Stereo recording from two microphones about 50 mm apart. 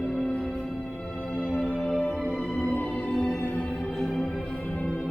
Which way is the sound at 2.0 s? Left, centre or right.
Left.